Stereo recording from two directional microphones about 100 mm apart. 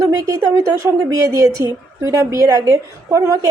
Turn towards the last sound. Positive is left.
turn(degrees=-30)  # may be behind; listen again after turning